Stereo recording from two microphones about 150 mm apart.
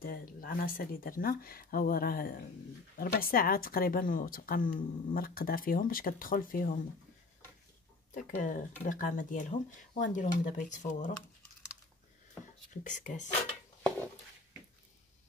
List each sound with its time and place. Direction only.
0.0 s a woman's voice: 75° left (ahead or behind)
8.1 s speech: 60° left (ahead or behind)
12.8 s speech: 55° left (ahead or behind)